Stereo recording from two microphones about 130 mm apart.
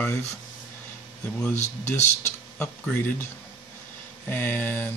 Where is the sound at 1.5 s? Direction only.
60° left (ahead or behind).